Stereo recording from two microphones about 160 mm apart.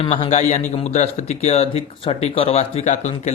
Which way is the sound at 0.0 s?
35° left (ahead or behind).